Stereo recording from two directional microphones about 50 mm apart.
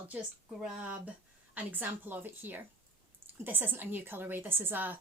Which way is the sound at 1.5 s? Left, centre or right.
Right.